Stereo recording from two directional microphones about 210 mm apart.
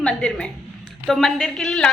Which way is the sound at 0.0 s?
5° left (ahead or behind).